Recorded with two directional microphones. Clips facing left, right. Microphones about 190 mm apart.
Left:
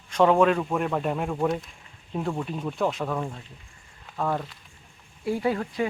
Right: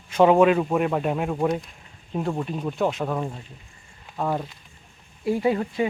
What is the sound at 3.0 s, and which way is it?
Speech, 15° right (ahead or behind).